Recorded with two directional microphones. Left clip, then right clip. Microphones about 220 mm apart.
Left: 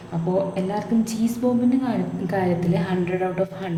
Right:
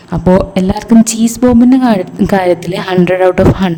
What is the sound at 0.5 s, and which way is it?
A woman's voice, 50° right (ahead or behind).